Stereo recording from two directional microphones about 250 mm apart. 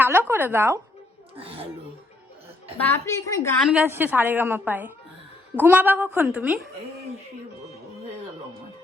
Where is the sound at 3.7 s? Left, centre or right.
Centre.